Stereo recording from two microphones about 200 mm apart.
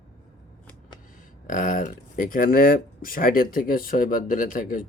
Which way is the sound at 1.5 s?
45° left (ahead or behind).